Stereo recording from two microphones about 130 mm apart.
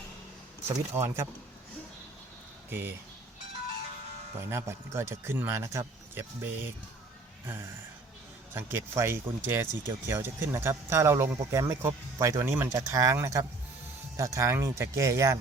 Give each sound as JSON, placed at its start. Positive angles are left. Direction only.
{"t": 0.9, "sound": "speech", "side_deg": -20}
{"t": 2.6, "sound": "speech", "side_deg": -15}
{"t": 4.4, "sound": "speech", "side_deg": -20}
{"t": 8.5, "sound": "speech", "side_deg": -20}